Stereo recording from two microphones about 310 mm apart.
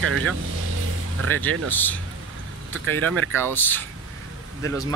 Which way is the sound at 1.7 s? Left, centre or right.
Centre.